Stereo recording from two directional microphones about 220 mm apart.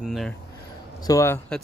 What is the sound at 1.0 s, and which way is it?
Speech, 15° left (ahead or behind).